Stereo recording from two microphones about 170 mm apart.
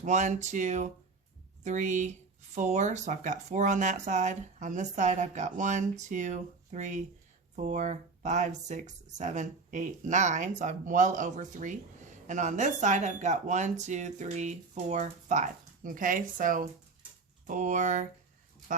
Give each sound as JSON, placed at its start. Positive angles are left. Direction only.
{"t": 0.0, "sound": "speech", "side_deg": -45}